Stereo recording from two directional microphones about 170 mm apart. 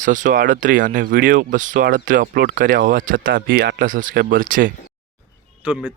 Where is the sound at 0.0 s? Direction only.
50° right (ahead or behind).